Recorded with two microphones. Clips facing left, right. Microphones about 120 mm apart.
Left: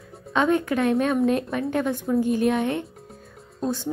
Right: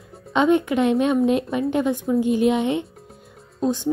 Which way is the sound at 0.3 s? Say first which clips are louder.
Right 3 dB; 20° right (ahead or behind).